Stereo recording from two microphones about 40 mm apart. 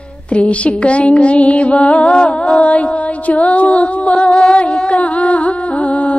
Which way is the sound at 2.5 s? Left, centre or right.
Left.